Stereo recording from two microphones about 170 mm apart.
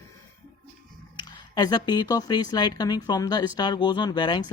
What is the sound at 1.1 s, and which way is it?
Speech, 25° left (ahead or behind).